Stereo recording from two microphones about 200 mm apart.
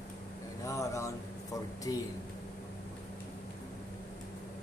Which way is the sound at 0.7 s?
15° left (ahead or behind).